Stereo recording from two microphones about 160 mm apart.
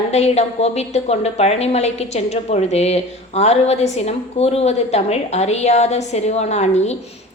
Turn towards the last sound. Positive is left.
turn(degrees=45)  # may be behind; listen again after turning